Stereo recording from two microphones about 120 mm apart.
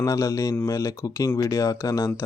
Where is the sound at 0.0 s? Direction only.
25° left (ahead or behind).